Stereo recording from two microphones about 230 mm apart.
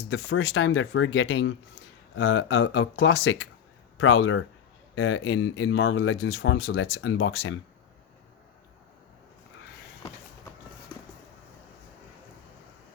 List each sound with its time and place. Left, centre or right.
0.1 s speech: left